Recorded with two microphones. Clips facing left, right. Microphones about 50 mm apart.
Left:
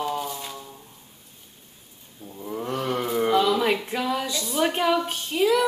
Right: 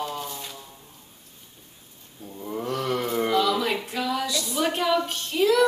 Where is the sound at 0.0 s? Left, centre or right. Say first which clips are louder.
Left 4 dB; centre.